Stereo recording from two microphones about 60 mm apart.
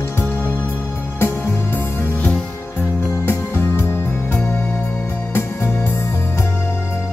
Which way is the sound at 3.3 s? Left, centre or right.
Left.